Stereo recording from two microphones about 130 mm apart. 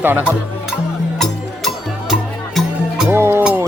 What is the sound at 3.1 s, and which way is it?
Music, 20° right (ahead or behind).